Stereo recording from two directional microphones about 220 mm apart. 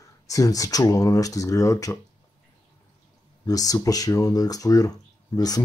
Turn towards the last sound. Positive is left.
turn(degrees=15)  # may be behind; listen again after turning